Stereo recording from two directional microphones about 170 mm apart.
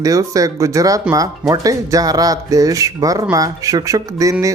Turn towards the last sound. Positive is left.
turn(degrees=-20)  # may be behind; listen again after turning